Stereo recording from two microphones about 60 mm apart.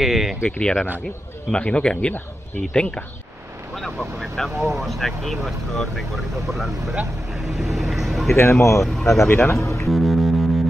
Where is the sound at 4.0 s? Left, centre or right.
Centre.